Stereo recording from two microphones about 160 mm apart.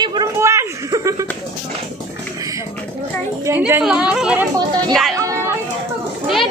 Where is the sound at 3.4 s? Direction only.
15° right (ahead or behind).